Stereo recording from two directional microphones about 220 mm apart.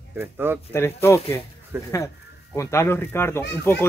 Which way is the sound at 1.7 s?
10° right (ahead or behind).